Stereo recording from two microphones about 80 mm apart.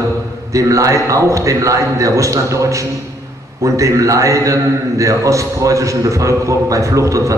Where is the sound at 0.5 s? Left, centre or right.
Right.